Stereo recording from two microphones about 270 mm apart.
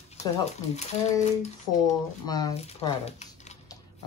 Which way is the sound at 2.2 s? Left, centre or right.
Centre.